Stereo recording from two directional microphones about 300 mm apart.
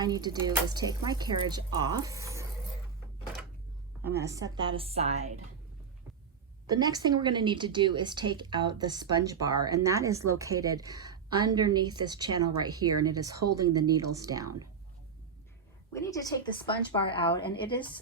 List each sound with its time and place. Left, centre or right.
0.0 s a woman's voice: centre
4.0 s a woman's voice: centre
6.7 s a woman's voice: centre
15.9 s a woman's voice: centre